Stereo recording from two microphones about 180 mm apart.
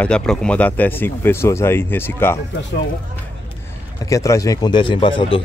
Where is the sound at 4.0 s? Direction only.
15° left (ahead or behind).